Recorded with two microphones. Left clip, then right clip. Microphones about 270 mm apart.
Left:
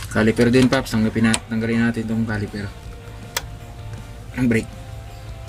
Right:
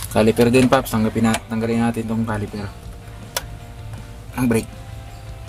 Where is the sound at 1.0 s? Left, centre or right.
Right.